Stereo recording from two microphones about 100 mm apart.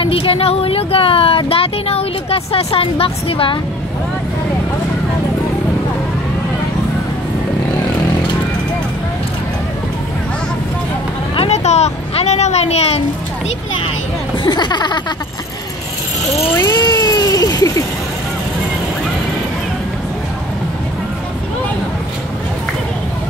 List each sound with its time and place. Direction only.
0.0 s speech: 65° left (ahead or behind)
11.3 s speech: 90° left
14.4 s speech: 45° left (ahead or behind)
16.5 s speech: 35° left (ahead or behind)